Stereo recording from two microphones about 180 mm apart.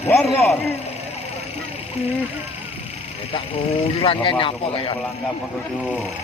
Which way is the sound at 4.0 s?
30° left (ahead or behind).